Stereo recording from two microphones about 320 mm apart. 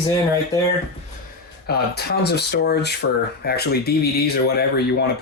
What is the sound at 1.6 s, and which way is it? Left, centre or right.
Speech, left.